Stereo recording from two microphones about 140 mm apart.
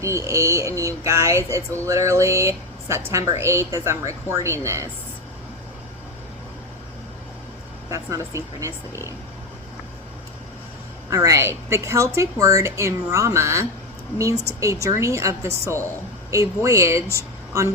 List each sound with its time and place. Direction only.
0.0 s speech: 20° right (ahead or behind)
7.9 s speech: 20° right (ahead or behind)
11.1 s speech: 25° right (ahead or behind)